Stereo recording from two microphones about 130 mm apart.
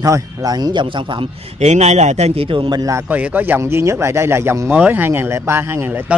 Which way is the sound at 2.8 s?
25° right (ahead or behind).